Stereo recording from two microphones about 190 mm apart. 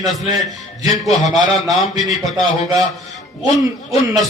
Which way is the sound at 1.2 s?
20° right (ahead or behind).